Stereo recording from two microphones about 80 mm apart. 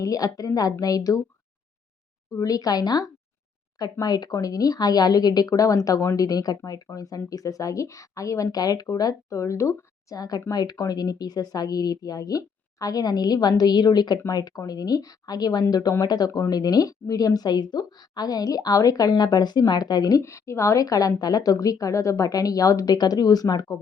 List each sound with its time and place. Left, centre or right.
0.0 s speech: left
2.3 s speech: left